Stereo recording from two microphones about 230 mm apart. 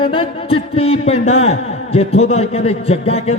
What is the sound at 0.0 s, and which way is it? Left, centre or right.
Speech, left.